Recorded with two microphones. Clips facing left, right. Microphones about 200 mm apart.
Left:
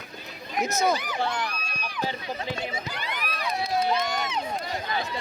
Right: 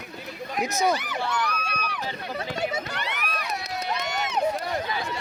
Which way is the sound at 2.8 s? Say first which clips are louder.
Right 1 dB; 75° right (ahead or behind).